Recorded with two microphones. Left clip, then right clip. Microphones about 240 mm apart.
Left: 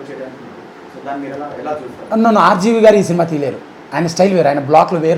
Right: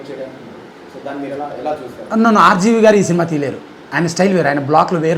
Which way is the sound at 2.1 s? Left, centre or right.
Right.